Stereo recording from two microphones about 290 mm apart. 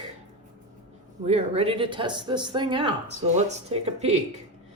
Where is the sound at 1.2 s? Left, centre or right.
Right.